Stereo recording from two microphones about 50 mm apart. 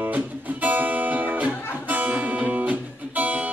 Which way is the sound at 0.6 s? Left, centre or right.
Right.